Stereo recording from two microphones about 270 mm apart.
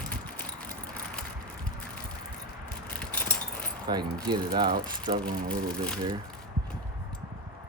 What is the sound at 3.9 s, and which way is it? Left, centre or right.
Speech, centre.